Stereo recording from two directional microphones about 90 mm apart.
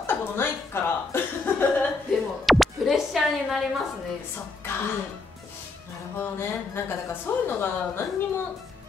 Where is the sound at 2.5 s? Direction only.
Centre (ahead or behind).